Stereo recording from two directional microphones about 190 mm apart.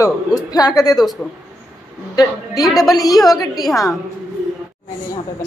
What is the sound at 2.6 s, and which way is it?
Speech, centre (ahead or behind).